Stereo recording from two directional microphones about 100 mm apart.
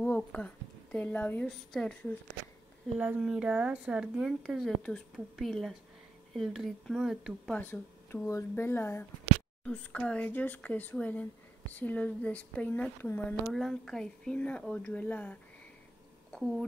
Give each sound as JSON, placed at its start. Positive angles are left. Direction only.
{"t": 0.0, "sound": "speech", "side_deg": 15}
{"t": 3.2, "sound": "a woman's voice", "side_deg": -10}
{"t": 7.5, "sound": "speech", "side_deg": 20}
{"t": 9.7, "sound": "speech", "side_deg": 10}
{"t": 16.3, "sound": "a sound", "side_deg": 5}